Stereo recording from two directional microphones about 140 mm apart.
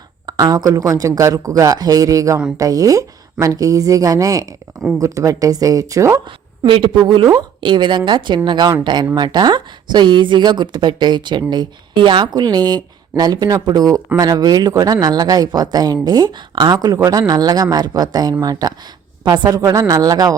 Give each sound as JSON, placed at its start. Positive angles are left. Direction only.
{"t": 0.3, "sound": "a woman's voice", "side_deg": -25}
{"t": 6.7, "sound": "a woman's voice", "side_deg": -40}